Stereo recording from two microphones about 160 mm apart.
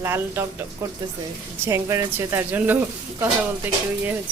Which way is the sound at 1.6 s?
15° right (ahead or behind).